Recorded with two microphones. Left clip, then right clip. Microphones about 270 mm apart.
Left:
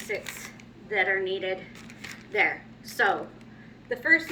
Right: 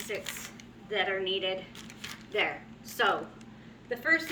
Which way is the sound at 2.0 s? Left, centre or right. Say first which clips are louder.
Left 5 dB; centre.